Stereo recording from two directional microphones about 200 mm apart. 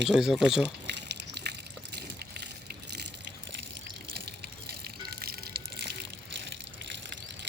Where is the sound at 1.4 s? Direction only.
55° right (ahead or behind).